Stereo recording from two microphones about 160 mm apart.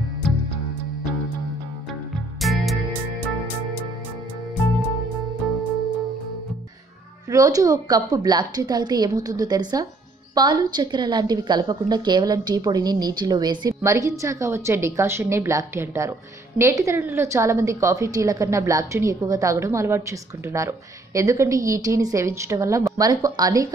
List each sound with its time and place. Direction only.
0.2 s music: 5° left (ahead or behind)
2.4 s music: centre (ahead or behind)
3.2 s music: 10° left (ahead or behind)
7.2 s a woman's voice: 20° right (ahead or behind)